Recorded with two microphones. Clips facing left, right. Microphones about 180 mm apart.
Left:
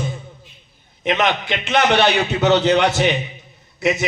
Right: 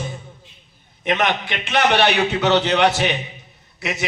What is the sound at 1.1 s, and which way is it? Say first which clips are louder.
Speech: left 1 dB; 50° right (ahead or behind).